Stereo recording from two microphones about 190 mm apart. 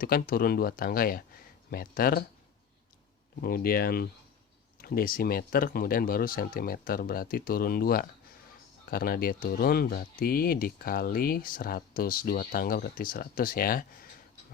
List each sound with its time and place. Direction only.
0.0 s speech: 50° left (ahead or behind)
3.4 s speech: 50° left (ahead or behind)